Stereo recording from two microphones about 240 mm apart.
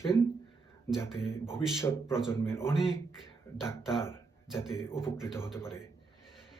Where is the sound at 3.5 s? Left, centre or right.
Centre.